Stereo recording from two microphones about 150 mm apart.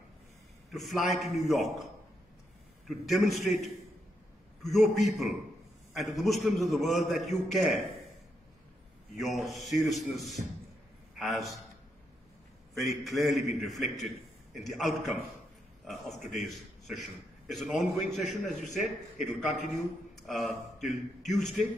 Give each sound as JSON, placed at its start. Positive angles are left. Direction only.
{"t": 0.7, "sound": "a man's voice", "side_deg": 0}
{"t": 2.9, "sound": "a man's voice", "side_deg": 0}
{"t": 9.1, "sound": "a man's voice", "side_deg": 0}
{"t": 13.0, "sound": "a man's voice", "side_deg": 0}